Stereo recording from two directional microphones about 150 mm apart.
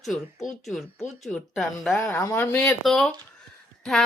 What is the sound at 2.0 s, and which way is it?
Speech, 20° left (ahead or behind).